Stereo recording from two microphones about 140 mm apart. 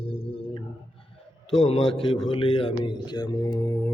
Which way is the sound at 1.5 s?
40° left (ahead or behind).